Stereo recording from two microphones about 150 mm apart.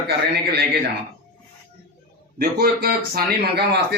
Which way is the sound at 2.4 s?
90° right.